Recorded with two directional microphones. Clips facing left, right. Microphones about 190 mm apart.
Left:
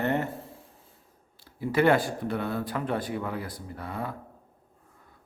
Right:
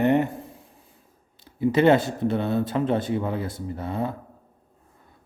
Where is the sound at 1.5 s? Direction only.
20° right (ahead or behind).